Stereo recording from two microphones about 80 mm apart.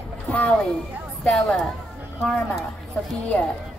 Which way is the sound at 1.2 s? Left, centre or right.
Centre.